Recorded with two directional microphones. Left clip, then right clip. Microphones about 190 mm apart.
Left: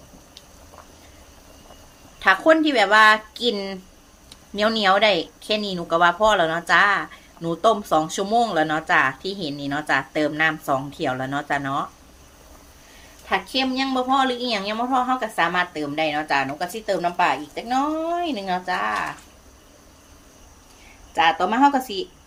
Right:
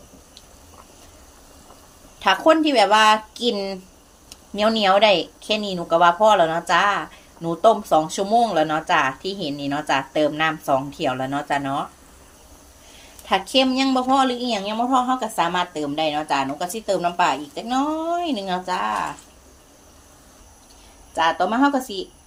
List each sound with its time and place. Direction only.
2.1 s a woman's voice: centre (ahead or behind)
13.2 s a woman's voice: 25° right (ahead or behind); by 19.0 s 10° right (ahead or behind)
21.2 s a woman's voice: centre (ahead or behind)